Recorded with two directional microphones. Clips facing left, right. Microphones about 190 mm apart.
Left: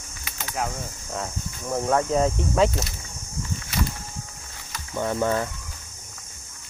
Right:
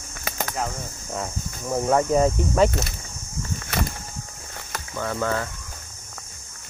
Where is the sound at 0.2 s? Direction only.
45° right (ahead or behind).